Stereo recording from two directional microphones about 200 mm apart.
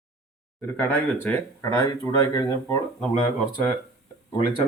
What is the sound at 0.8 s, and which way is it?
Speech, 10° left (ahead or behind).